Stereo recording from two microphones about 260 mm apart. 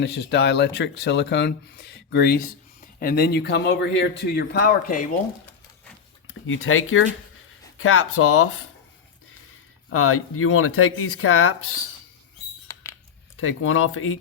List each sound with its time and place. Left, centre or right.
0.0 s speech: left
6.5 s speech: left
9.9 s speech: left
12.7 s rodents: centre
13.3 s speech: left